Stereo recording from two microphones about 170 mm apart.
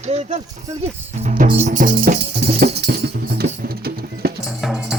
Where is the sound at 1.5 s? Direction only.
40° right (ahead or behind); by 4.3 s 65° right (ahead or behind).